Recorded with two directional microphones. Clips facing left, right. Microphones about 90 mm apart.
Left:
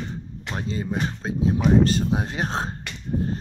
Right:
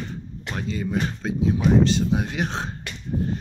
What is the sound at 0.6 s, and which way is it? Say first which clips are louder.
Speech: right 1 dB; 30° left (ahead or behind).